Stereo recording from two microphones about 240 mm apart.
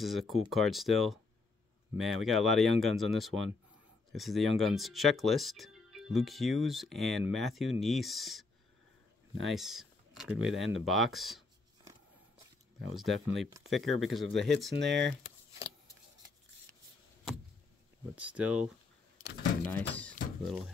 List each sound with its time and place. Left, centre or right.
0.0 s speech: centre
12.8 s speech: centre
14.8 s speech: right
18.1 s speech: centre